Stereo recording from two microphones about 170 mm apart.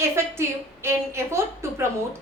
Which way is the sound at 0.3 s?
15° right (ahead or behind).